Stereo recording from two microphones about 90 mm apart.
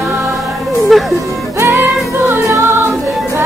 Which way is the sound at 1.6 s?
25° right (ahead or behind).